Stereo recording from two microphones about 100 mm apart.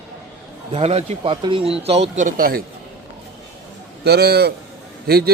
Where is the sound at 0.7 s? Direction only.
85° right.